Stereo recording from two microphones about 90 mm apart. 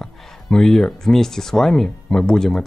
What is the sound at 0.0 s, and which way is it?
Speech, 5° left (ahead or behind).